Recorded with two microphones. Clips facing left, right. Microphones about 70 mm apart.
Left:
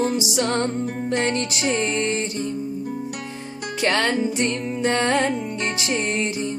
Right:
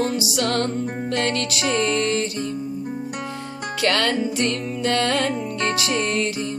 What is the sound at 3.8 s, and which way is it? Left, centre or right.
Music, centre.